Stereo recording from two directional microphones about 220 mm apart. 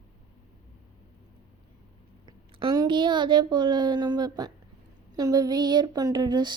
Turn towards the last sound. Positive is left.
turn(degrees=-20)  # may be behind; listen again after turning